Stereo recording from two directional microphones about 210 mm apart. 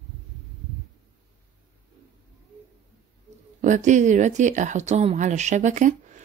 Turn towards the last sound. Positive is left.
turn(degrees=-35)  # may be behind; listen again after turning